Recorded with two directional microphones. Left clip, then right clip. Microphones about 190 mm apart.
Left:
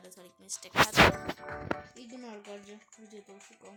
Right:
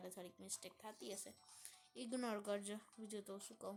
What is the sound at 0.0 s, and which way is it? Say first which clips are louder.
Speech: left 2 dB; 15° right (ahead or behind).